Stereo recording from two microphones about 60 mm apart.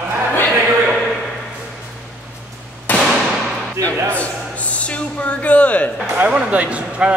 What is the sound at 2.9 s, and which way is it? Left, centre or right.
Firecracker, left.